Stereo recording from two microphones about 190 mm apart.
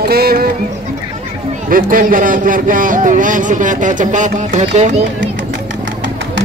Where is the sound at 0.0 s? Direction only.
55° right (ahead or behind).